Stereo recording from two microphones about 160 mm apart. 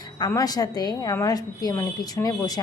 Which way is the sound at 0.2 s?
25° left (ahead or behind).